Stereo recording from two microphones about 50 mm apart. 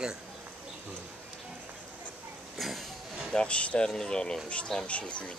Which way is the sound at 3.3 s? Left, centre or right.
Centre.